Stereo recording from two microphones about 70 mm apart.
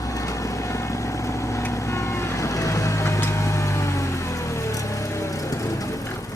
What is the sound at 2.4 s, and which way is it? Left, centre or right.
Vehicle, left.